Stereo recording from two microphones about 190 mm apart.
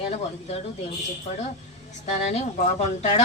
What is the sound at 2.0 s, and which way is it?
Speech, 35° left (ahead or behind).